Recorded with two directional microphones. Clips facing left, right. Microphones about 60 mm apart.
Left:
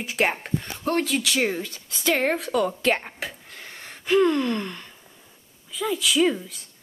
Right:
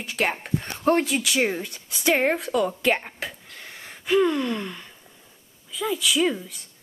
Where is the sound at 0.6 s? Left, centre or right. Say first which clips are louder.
Right 7 dB; right.